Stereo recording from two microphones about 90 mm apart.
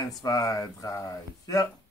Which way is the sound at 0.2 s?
45° left (ahead or behind).